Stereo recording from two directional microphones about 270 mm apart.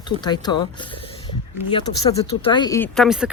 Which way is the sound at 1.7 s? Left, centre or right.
Centre.